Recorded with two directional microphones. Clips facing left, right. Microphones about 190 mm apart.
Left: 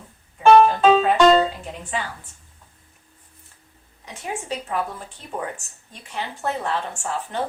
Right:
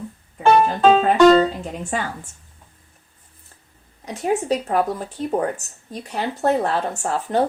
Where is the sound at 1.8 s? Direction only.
45° right (ahead or behind).